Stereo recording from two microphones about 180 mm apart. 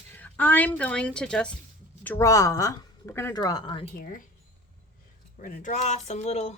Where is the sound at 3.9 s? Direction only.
50° left (ahead or behind).